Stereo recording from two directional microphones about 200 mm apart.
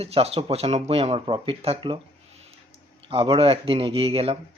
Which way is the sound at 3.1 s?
25° right (ahead or behind).